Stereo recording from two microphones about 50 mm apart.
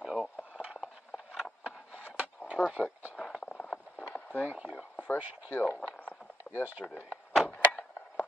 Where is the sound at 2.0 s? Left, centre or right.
Right.